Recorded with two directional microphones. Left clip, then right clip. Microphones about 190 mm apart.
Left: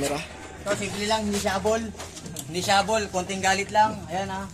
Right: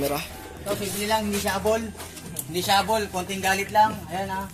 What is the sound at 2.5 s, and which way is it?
A man's voice, centre (ahead or behind).